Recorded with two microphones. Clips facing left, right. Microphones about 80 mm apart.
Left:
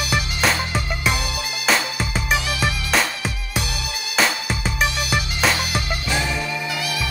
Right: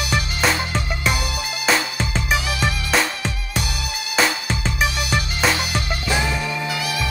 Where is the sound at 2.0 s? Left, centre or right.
Centre.